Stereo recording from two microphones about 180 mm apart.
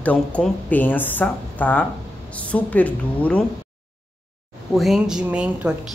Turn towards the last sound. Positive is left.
turn(degrees=-5)  # may be behind; listen again after turning